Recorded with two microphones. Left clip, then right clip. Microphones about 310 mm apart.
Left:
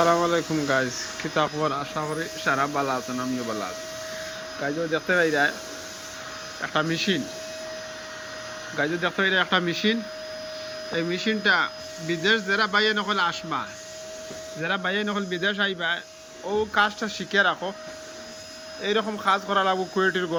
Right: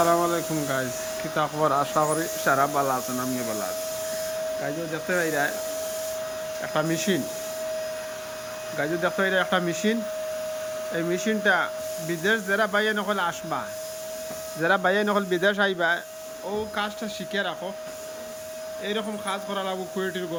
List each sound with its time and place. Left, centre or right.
0.0 s speech: centre
4.6 s speech: centre
6.6 s speech: centre
8.8 s speech: centre
18.9 s speech: centre